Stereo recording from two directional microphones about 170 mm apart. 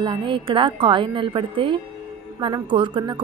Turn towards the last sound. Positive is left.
turn(degrees=-30)  # may be behind; listen again after turning